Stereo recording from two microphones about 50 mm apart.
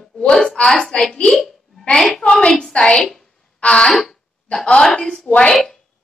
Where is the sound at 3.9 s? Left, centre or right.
Centre.